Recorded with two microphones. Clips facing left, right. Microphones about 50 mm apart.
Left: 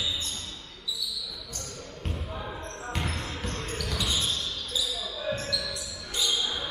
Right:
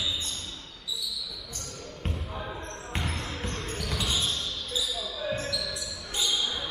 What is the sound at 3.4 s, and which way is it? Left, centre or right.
Basketball bounce, right.